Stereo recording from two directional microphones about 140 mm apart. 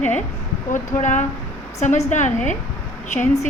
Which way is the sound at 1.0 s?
60° left (ahead or behind).